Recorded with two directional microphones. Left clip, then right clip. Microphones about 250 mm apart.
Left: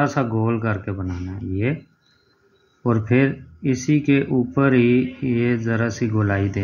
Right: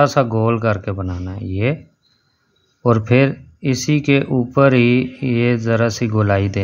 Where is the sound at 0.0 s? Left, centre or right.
Right.